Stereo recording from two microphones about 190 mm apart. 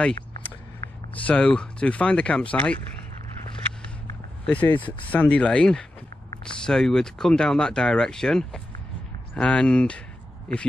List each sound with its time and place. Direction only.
1.2 s speech: 5° left (ahead or behind)
4.5 s speech: 10° left (ahead or behind)